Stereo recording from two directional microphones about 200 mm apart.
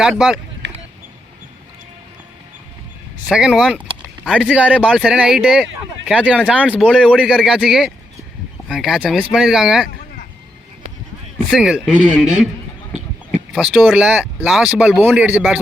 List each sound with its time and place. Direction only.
0.0 s speech: 5° right (ahead or behind)
0.6 s a sound: 65° right (ahead or behind)
3.2 s speech: 5° right (ahead or behind)
11.5 s speech: 5° right (ahead or behind)